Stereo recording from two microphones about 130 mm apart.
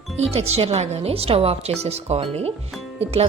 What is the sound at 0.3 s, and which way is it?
Speech, 55° right (ahead or behind).